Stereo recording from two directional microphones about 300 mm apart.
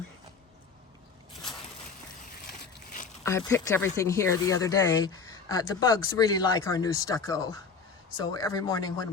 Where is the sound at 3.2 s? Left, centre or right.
Centre.